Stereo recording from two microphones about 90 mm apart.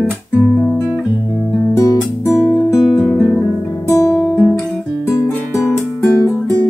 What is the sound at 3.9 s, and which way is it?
Music, 35° left (ahead or behind).